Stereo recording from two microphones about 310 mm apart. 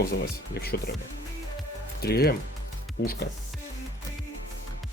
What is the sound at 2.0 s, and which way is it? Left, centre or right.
Speech, left.